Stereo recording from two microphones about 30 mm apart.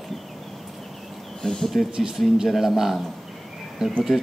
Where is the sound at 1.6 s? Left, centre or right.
Centre.